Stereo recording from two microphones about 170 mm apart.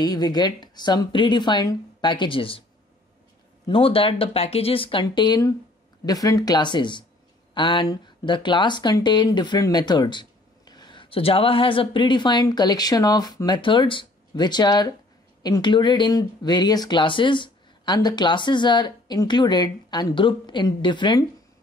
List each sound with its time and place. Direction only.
0.0 s speech: 25° left (ahead or behind)
3.6 s speech: 30° left (ahead or behind)